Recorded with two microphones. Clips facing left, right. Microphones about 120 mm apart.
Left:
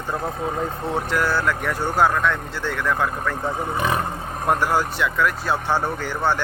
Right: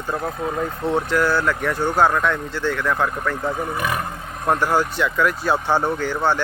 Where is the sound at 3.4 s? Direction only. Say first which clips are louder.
Left 2 dB; 25° left (ahead or behind).